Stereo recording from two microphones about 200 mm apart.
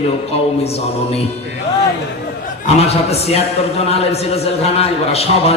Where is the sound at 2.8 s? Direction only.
30° left (ahead or behind).